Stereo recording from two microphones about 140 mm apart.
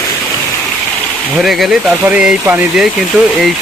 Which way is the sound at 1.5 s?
Centre (ahead or behind).